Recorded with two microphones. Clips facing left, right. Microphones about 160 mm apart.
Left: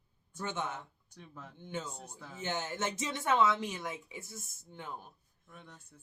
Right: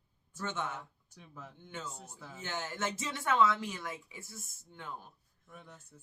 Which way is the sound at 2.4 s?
20° left (ahead or behind).